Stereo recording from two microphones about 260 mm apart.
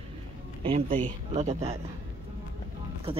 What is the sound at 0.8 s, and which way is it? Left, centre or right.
Speech, right.